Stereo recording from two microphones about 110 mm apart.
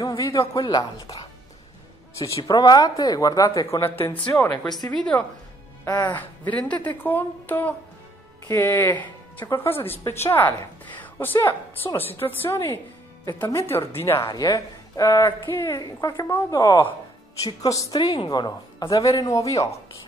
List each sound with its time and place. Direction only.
0.2 s speech: 30° left (ahead or behind)
0.6 s a woman's voice: 40° left (ahead or behind)
1.0 s music: 60° left (ahead or behind)
2.2 s a woman's voice: 30° left (ahead or behind)
3.8 s speech: 20° left (ahead or behind)
4.5 s a woman's voice: 40° left (ahead or behind)
6.1 s a woman's voice: 15° left (ahead or behind)
11.0 s a sound: 15° left (ahead or behind)
11.4 s a woman's voice: 20° left (ahead or behind)
14.2 s a woman's voice: 35° left (ahead or behind)